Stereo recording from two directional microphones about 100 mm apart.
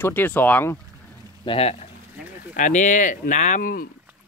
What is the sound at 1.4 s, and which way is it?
Speech, 80° left.